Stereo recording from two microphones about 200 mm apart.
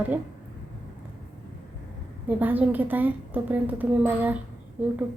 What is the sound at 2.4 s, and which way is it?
A woman's voice, 10° right (ahead or behind).